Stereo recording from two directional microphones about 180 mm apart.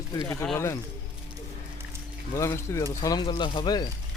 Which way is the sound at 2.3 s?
15° left (ahead or behind).